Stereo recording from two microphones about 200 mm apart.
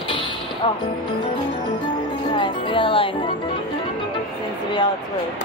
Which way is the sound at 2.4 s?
25° left (ahead or behind).